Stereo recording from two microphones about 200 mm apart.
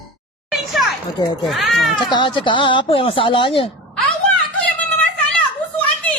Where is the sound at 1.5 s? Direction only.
Centre (ahead or behind).